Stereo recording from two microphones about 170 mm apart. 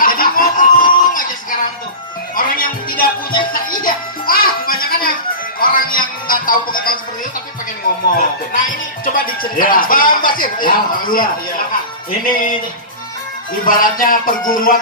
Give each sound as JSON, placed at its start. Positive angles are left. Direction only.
{"t": 0.0, "sound": "a sound", "side_deg": 55}
{"t": 2.3, "sound": "music", "side_deg": 55}
{"t": 5.6, "sound": "speech", "side_deg": 55}
{"t": 9.0, "sound": "speech", "side_deg": 55}
{"t": 13.7, "sound": "speech", "side_deg": 55}